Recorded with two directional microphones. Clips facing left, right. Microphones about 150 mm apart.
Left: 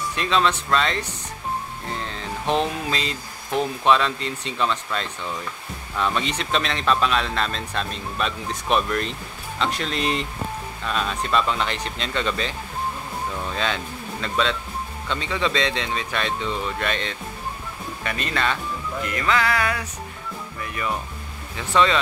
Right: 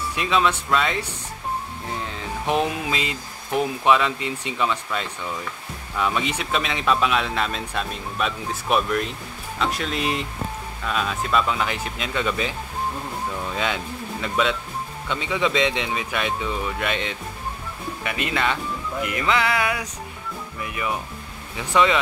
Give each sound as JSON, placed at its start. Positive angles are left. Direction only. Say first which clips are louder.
{"t": 0.1, "sound": "speech", "louder": "even", "side_deg": -10}